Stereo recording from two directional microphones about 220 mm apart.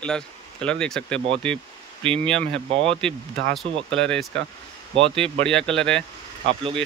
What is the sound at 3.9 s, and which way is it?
Speech, 5° left (ahead or behind).